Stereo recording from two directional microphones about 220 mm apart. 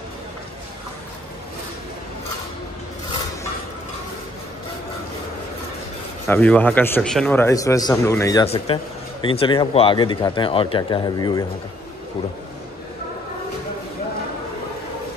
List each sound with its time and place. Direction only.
6.2 s speech: 10° left (ahead or behind)
8.7 s speech: 25° left (ahead or behind)